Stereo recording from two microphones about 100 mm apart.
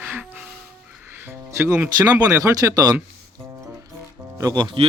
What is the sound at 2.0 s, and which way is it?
Speech, 35° right (ahead or behind).